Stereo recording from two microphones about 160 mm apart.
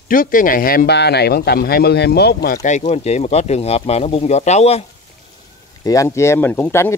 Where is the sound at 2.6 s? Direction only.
50° left (ahead or behind).